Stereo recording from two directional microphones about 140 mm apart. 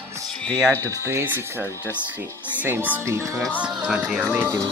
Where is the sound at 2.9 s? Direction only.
20° right (ahead or behind).